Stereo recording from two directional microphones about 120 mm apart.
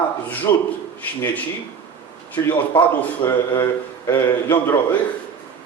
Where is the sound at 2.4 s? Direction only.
30° left (ahead or behind).